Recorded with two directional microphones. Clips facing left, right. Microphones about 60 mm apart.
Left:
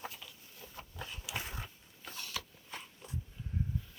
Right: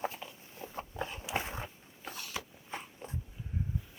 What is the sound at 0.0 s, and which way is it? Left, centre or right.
Dog, right.